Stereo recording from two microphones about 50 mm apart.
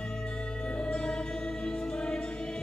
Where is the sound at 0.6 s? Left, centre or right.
Centre.